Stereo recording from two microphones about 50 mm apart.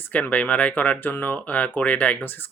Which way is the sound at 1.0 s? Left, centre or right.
Left.